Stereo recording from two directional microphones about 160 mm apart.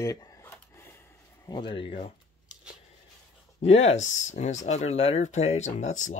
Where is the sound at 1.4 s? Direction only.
25° left (ahead or behind).